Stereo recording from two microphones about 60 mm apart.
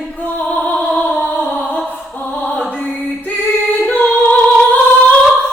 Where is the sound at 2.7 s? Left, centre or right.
Left.